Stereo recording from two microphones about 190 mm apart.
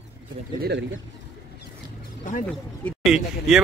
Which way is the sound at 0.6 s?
60° right (ahead or behind).